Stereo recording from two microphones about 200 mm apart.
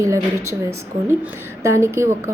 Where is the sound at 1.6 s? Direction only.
15° right (ahead or behind).